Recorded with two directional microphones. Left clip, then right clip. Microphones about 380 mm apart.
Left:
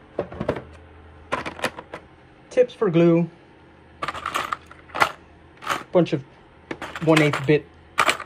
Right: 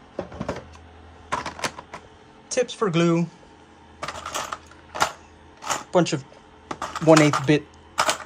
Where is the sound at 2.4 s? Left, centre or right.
Centre.